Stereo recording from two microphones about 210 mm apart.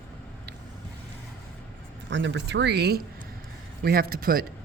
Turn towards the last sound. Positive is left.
turn(degrees=-45)  # may be behind; listen again after turning